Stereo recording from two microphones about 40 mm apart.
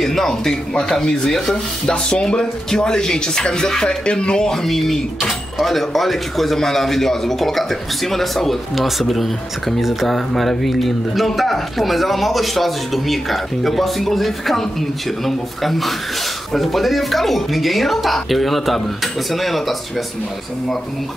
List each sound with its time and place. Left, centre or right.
0.0 s speech: centre
4.6 s speech: centre